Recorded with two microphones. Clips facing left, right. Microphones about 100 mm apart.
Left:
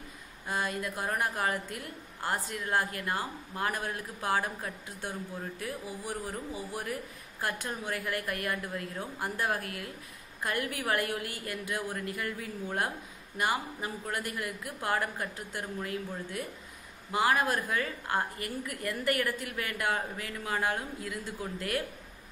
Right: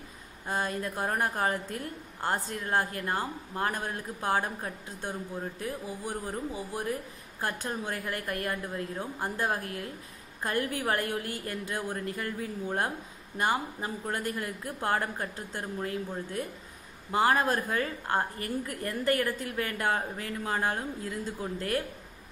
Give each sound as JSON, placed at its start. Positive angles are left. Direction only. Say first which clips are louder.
{"t": 0.5, "sound": "a woman's voice", "louder": "right 2 dB", "side_deg": -35}